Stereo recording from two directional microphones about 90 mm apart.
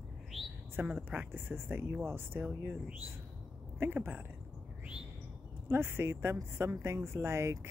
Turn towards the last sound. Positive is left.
turn(degrees=-30)  # may be behind; listen again after turning